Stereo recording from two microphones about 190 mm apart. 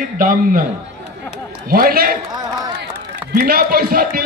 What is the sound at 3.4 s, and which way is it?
Speech, 50° right (ahead or behind).